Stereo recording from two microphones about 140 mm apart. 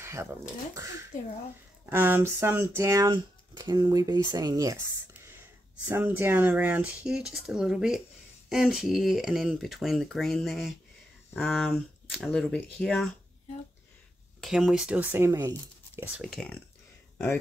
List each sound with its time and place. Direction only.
0.0 s a sound: 20° right (ahead or behind)
0.7 s speech: 20° right (ahead or behind)
5.9 s speech: 15° right (ahead or behind)
14.4 s speech: 5° right (ahead or behind); by 15.5 s 20° right (ahead or behind)
16.2 s speech: centre (ahead or behind)